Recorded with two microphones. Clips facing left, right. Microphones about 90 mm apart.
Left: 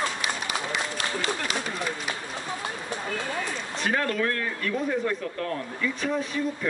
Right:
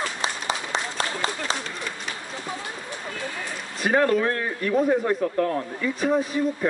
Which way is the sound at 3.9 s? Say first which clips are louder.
Right 7 dB; 25° right (ahead or behind).